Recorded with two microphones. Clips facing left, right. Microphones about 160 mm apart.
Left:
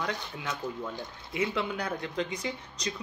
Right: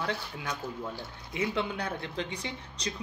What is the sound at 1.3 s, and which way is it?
Speech, 30° right (ahead or behind).